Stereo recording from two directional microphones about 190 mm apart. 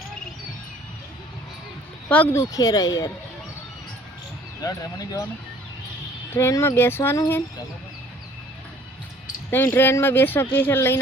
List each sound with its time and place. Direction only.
2.0 s speech: 10° left (ahead or behind)
4.6 s speech: 20° left (ahead or behind)
6.3 s speech: 15° left (ahead or behind)
9.5 s speech: 10° left (ahead or behind)